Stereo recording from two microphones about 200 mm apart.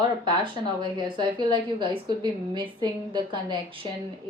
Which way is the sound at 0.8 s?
25° right (ahead or behind).